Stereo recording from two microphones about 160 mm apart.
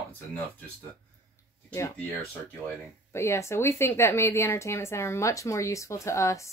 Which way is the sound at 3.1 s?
15° left (ahead or behind).